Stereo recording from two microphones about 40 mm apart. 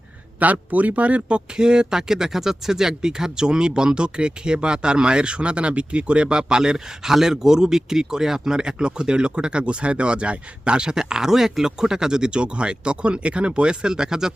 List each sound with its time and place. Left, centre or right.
0.3 s a man's voice: right
1.5 s speech: centre